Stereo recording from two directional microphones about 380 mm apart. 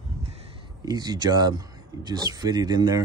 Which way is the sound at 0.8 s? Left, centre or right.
Centre.